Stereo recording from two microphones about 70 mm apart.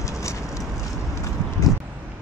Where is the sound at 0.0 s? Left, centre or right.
Left.